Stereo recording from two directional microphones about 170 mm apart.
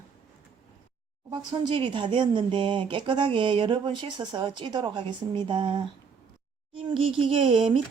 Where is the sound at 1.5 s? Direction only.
25° right (ahead or behind).